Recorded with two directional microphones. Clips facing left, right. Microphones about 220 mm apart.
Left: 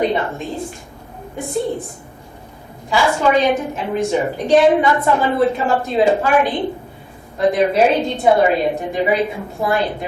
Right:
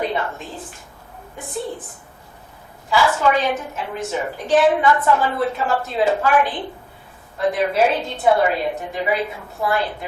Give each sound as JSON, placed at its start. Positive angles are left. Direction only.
{"t": 0.0, "sound": "a woman's voice", "side_deg": 20}
{"t": 0.3, "sound": "a woman's voice", "side_deg": -5}
{"t": 2.9, "sound": "a woman's voice", "side_deg": 15}
{"t": 4.4, "sound": "a woman's voice", "side_deg": -5}
{"t": 4.7, "sound": "a woman's voice", "side_deg": 20}